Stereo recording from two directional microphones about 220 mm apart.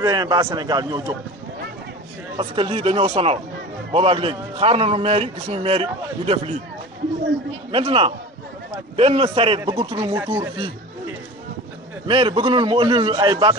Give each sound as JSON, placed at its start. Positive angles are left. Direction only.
{"t": 0.0, "sound": "a man's voice", "side_deg": -15}
{"t": 2.3, "sound": "a man's voice", "side_deg": -25}
{"t": 7.7, "sound": "a man's voice", "side_deg": -25}
{"t": 12.1, "sound": "a man's voice", "side_deg": -25}